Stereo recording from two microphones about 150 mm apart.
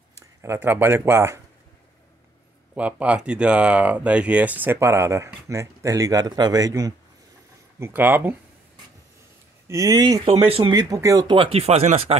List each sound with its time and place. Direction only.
0.4 s speech: 15° right (ahead or behind)
2.7 s speech: 10° right (ahead or behind)
7.8 s speech: 15° right (ahead or behind)
9.7 s speech: 25° right (ahead or behind)
10.2 s speech: 40° right (ahead or behind)